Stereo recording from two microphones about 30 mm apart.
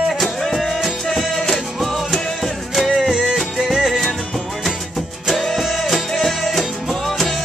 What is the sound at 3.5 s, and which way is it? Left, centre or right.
Music, centre.